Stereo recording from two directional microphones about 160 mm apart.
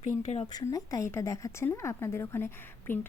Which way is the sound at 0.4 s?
25° left (ahead or behind).